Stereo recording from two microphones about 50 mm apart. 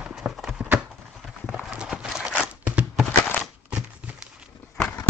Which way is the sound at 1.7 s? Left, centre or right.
Centre.